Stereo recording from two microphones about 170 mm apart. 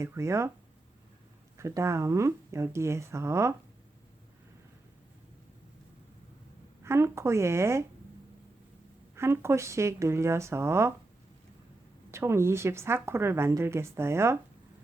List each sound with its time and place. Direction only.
0.0 s a woman's voice: 15° right (ahead or behind)
1.5 s a woman's voice: 15° right (ahead or behind)
6.8 s a woman's voice: 15° right (ahead or behind)
9.1 s a woman's voice: 15° right (ahead or behind)
12.1 s a woman's voice: 15° right (ahead or behind)